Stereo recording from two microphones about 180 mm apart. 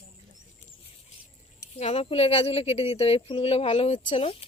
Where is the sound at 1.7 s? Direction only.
35° left (ahead or behind).